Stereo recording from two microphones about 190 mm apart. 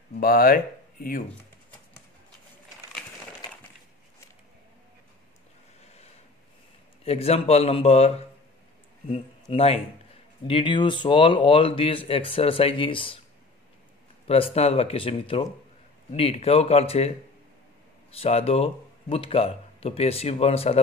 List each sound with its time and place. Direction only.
0.2 s speech: 50° left (ahead or behind)
7.1 s a man's voice: 30° left (ahead or behind)
14.2 s speech: 30° left (ahead or behind)
18.1 s speech: 30° left (ahead or behind)